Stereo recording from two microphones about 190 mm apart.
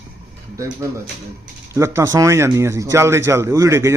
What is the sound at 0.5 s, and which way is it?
A man's voice, 15° right (ahead or behind).